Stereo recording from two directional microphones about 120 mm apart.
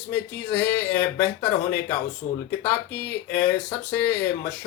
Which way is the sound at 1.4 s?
20° left (ahead or behind).